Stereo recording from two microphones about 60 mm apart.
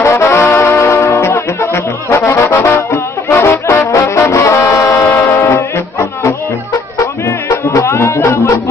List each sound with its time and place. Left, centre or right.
0.0 s music: left
2.4 s brass instrument: left
5.0 s music: left
6.2 s music: left